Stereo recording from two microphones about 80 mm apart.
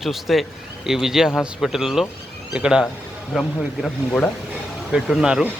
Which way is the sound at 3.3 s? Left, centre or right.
Centre.